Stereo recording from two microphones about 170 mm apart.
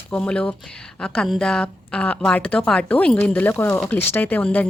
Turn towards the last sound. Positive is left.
turn(degrees=10)  # may be behind; listen again after turning